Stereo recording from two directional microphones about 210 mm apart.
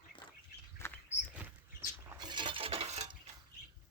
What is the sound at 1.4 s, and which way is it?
Rodents, 5° right (ahead or behind).